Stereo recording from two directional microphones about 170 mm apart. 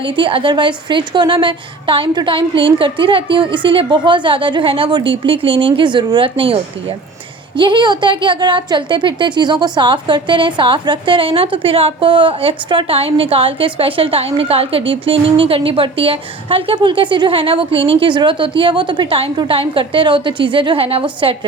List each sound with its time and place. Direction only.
0.0 s a woman's voice: 30° right (ahead or behind)